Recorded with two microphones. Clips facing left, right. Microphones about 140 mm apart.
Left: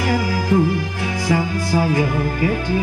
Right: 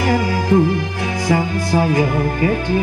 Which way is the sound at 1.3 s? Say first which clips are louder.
Right 2 dB; 5° left (ahead or behind).